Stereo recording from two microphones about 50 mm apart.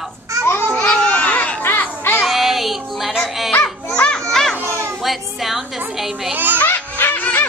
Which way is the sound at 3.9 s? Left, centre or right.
Centre.